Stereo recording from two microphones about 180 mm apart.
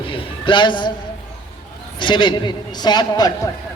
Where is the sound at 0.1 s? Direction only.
30° left (ahead or behind).